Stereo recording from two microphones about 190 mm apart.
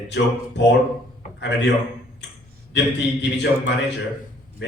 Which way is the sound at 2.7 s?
65° left (ahead or behind).